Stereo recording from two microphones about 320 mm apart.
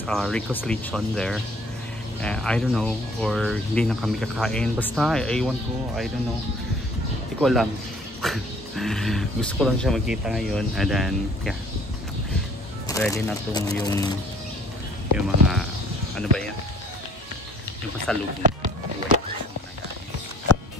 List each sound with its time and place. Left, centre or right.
0.0 s speech: centre
7.3 s speech: centre
12.8 s speech: centre
15.1 s speech: centre
18.1 s speech: centre
18.4 s speech: right